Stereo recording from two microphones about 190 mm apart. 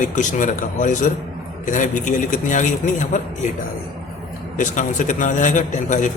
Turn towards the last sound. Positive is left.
turn(degrees=40)  # may be behind; listen again after turning